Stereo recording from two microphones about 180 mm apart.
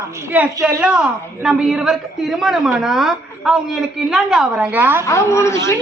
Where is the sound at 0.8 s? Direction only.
5° right (ahead or behind).